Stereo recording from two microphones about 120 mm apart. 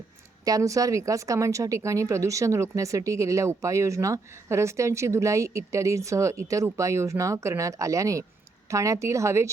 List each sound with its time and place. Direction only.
0.4 s speech: 30° right (ahead or behind)